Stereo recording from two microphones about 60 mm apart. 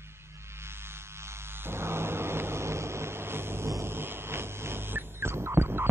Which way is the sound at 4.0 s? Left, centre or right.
Right.